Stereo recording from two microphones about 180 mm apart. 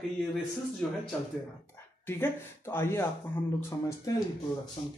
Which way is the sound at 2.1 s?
10° left (ahead or behind).